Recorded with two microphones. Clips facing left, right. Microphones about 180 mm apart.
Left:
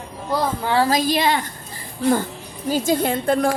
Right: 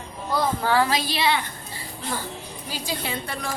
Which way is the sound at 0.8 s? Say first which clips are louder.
Left 5 dB; 45° left (ahead or behind).